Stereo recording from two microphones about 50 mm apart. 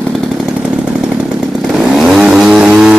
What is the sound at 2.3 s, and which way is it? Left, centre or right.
Vehicle, centre.